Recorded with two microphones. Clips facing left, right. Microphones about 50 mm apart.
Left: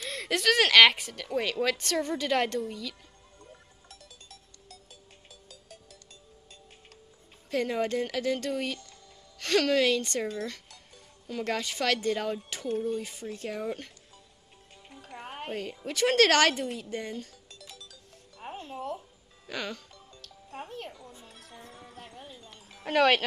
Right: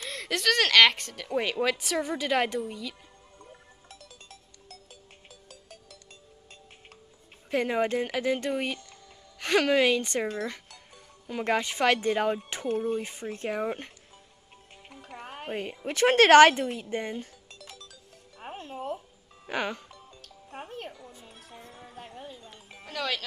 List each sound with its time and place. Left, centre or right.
0.0 s speech: centre
5.3 s music: right
7.5 s speech: right
14.9 s music: right
15.4 s a woman's voice: right
16.9 s music: right
19.4 s music: right
22.8 s speech: left